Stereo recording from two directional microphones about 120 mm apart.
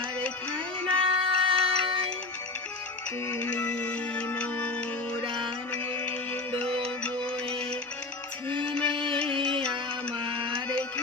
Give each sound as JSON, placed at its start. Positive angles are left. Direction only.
{"t": 0.5, "sound": "music", "side_deg": -45}
{"t": 3.2, "sound": "music", "side_deg": 15}
{"t": 5.2, "sound": "music", "side_deg": -45}
{"t": 6.1, "sound": "music", "side_deg": 10}
{"t": 8.6, "sound": "music", "side_deg": 10}
{"t": 10.2, "sound": "music", "side_deg": -45}